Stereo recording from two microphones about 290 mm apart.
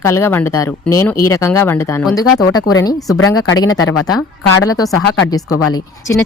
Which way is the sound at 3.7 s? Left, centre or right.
Left.